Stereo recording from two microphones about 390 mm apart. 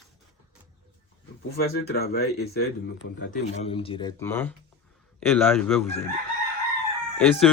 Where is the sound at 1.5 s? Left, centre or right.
Left; by 5.9 s centre.